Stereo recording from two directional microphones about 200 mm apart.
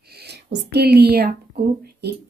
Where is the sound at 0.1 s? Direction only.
55° right (ahead or behind).